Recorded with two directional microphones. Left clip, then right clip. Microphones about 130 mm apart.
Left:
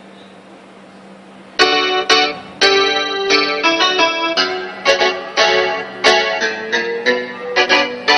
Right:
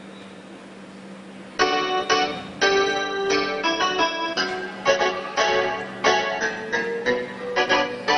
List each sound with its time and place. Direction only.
1.6 s music: 25° left (ahead or behind)